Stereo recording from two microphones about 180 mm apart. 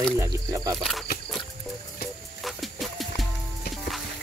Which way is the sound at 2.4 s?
Centre (ahead or behind).